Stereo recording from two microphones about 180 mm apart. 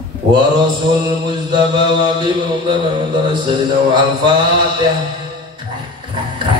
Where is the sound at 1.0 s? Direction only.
25° right (ahead or behind).